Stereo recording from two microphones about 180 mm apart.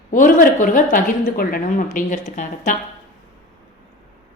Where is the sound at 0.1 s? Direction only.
50° left (ahead or behind).